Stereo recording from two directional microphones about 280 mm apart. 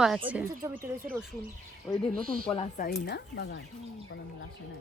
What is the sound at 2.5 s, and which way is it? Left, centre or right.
Speech, left.